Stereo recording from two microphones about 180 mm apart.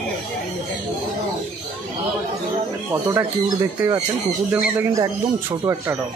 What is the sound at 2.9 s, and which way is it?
Speech, 20° right (ahead or behind).